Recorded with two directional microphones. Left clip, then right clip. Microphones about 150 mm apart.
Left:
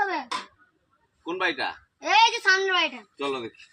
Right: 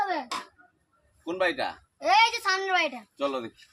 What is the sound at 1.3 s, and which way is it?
A woman's voice, 20° right (ahead or behind).